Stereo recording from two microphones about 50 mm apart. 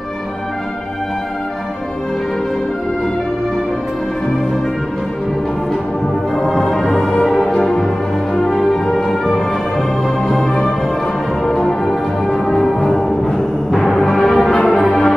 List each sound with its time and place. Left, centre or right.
6.3 s brass instrument: centre
8.4 s music: centre
14.9 s music: centre